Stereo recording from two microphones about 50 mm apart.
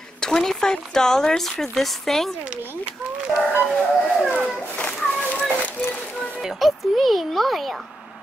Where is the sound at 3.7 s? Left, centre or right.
Centre.